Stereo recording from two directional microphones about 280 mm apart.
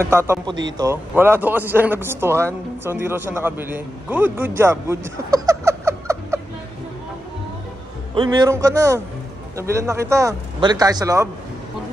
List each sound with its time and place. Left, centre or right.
0.0 s speech: centre
8.1 s speech: centre